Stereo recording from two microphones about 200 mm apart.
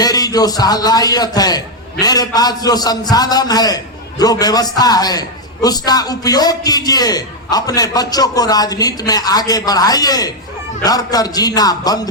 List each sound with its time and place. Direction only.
0.0 s a man's voice: 20° left (ahead or behind)